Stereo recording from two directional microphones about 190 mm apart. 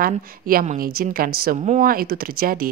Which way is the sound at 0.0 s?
50° right (ahead or behind).